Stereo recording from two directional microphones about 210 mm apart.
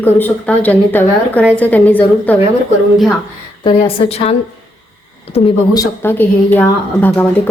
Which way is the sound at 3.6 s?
30° left (ahead or behind).